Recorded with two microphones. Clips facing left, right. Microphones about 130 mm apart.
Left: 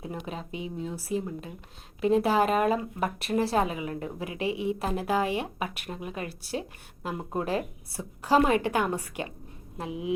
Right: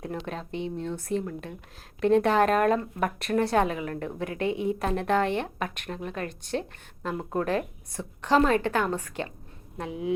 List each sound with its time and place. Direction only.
0.3 s speech: 5° left (ahead or behind)
9.9 s speech: 35° right (ahead or behind)